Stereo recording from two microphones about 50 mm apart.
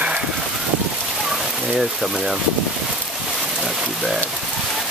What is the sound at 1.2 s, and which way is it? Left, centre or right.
Rain, centre.